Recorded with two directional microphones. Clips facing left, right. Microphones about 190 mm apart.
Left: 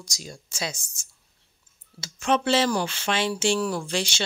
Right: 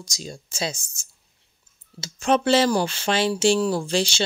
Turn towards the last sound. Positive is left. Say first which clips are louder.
# right 5 dB
turn(degrees=-30)  # may be behind; listen again after turning